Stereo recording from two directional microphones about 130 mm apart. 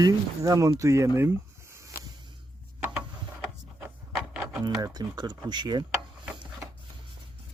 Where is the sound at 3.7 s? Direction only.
5° right (ahead or behind).